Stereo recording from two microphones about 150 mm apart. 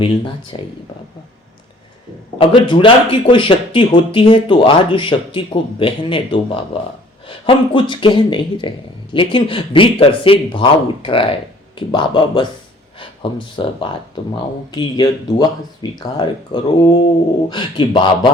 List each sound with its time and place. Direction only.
0.0 s speech: 35° left (ahead or behind)
2.4 s speech: 35° left (ahead or behind)
13.6 s speech: 30° left (ahead or behind)